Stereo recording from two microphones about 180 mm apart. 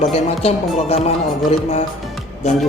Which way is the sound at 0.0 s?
35° left (ahead or behind).